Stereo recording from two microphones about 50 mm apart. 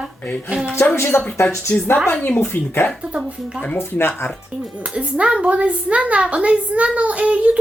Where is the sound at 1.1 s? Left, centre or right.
Left.